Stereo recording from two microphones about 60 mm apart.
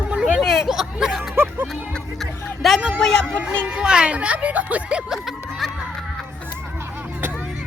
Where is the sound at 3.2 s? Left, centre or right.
Right.